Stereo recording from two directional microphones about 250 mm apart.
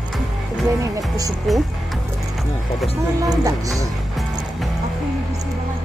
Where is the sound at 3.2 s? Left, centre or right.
Centre.